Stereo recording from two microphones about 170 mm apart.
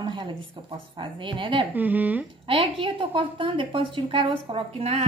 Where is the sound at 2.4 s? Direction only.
35° right (ahead or behind).